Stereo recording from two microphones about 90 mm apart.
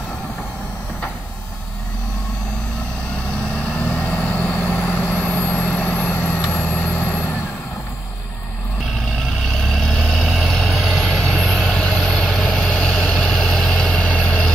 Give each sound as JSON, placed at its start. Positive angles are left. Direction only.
{"t": 3.5, "sound": "vehicle", "side_deg": 15}
{"t": 9.7, "sound": "vehicle", "side_deg": 5}